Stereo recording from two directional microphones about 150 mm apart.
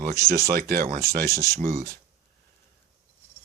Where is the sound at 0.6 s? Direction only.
75° right (ahead or behind).